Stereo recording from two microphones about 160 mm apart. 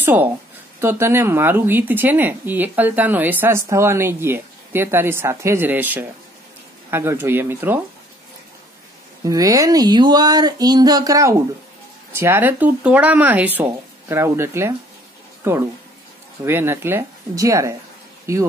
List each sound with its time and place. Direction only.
0.0 s speech: 10° right (ahead or behind)
9.2 s speech: 20° right (ahead or behind)